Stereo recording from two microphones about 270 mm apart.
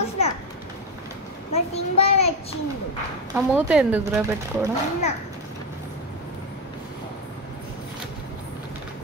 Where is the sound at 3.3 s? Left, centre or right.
Centre.